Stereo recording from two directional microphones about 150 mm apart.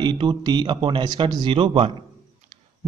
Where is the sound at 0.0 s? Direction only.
30° right (ahead or behind).